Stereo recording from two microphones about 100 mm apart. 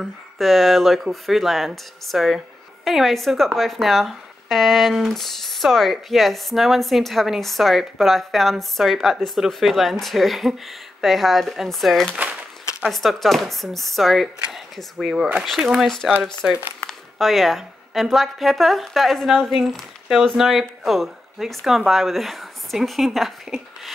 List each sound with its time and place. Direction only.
0.0 s speech: centre (ahead or behind)
12.1 s crumpling: 15° right (ahead or behind)
12.9 s speech: centre (ahead or behind)